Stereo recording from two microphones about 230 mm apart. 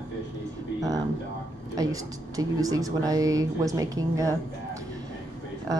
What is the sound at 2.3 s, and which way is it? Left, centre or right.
Speech, centre.